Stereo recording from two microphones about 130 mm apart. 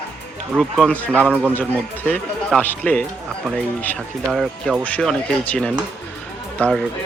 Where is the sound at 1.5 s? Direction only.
10° left (ahead or behind).